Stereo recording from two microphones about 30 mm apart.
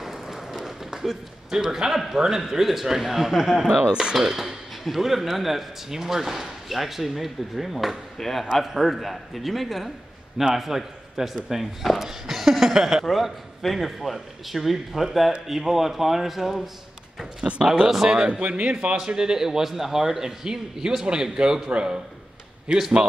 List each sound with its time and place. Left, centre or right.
0.0 s run: centre
0.9 s a man's voice: centre
3.6 s speech: right
4.4 s a man's voice: centre
8.2 s a man's voice: centre
17.4 s speech: centre
18.1 s speech: right
18.4 s speech: right
18.9 s speech: right
22.7 s speech: right